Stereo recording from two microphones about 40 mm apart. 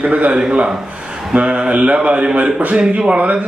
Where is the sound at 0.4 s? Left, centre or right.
Right.